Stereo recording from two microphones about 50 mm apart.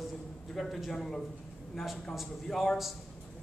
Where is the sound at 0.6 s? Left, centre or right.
Centre.